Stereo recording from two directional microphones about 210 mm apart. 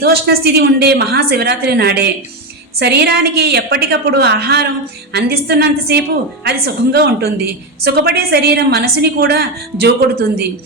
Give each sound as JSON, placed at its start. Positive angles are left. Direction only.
{"t": 0.0, "sound": "a woman's voice", "side_deg": -50}